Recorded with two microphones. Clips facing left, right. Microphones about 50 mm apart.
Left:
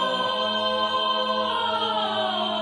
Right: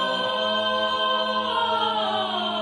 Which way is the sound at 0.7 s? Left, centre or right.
Centre.